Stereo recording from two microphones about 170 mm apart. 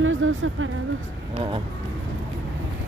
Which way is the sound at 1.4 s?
30° right (ahead or behind).